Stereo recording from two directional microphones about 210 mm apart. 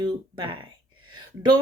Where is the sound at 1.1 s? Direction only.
20° right (ahead or behind).